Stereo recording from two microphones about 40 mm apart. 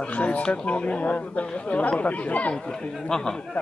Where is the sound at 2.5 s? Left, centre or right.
Left.